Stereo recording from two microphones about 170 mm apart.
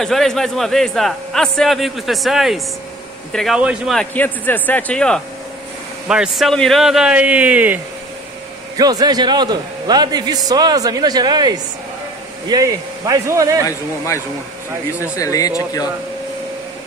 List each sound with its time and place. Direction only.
0.0 s a man's voice: centre (ahead or behind)
8.7 s a man's voice: 20° right (ahead or behind)
13.7 s speech: 15° left (ahead or behind)